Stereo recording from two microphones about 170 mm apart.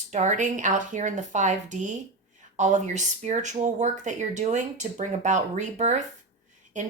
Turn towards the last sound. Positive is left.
turn(degrees=-45)  # may be behind; listen again after turning